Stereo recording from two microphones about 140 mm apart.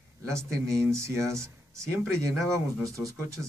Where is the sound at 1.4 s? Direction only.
20° right (ahead or behind).